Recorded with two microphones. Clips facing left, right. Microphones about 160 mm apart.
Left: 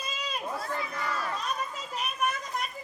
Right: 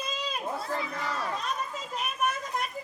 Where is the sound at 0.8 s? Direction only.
25° right (ahead or behind).